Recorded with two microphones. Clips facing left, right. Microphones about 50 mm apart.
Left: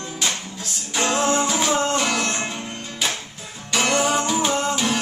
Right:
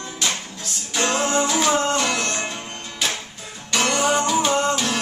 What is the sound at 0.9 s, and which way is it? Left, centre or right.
Music, centre.